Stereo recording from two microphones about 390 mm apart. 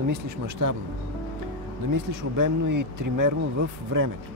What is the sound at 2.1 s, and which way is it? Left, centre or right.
Speech, right.